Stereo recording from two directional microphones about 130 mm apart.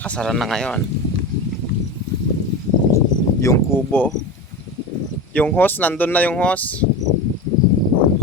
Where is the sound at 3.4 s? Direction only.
25° left (ahead or behind).